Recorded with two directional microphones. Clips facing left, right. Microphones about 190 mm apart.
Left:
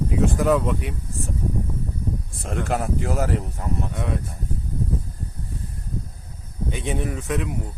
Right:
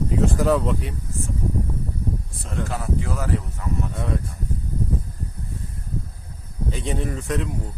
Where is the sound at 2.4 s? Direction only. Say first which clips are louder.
Left 7 dB; 55° left (ahead or behind).